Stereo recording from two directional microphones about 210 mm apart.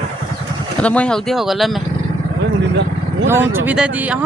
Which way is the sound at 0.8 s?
5° left (ahead or behind).